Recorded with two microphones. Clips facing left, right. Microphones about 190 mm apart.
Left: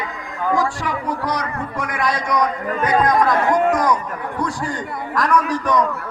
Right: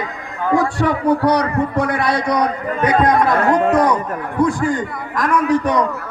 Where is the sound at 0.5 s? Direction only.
60° right (ahead or behind).